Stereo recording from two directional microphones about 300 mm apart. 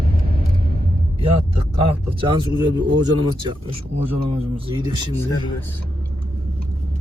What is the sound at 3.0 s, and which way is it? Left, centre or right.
Speech, centre.